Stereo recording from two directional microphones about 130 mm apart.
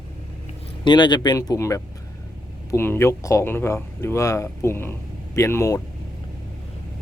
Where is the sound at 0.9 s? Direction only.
35° left (ahead or behind).